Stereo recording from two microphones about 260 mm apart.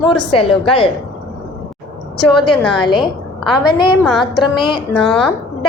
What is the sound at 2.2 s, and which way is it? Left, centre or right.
Speech, centre.